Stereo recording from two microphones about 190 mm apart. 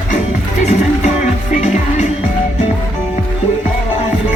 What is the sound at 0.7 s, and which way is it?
Music, 35° left (ahead or behind).